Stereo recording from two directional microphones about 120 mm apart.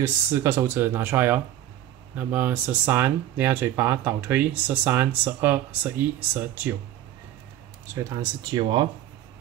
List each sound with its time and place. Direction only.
0.0 s speech: 25° right (ahead or behind)
7.9 s speech: 25° right (ahead or behind)
8.5 s speech: 40° right (ahead or behind)